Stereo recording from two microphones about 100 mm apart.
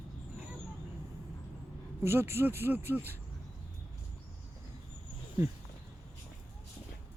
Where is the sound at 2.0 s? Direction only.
25° right (ahead or behind).